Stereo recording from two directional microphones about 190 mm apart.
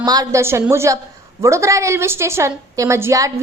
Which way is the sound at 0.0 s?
20° right (ahead or behind).